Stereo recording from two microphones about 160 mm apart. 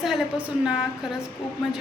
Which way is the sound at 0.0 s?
5° right (ahead or behind).